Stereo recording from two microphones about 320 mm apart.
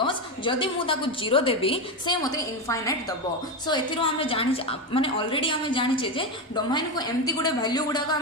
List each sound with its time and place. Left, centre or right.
0.0 s a woman's voice: centre